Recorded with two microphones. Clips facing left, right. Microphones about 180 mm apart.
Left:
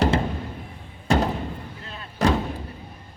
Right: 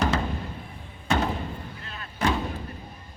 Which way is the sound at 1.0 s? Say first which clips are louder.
Left 4 dB; 35° left (ahead or behind).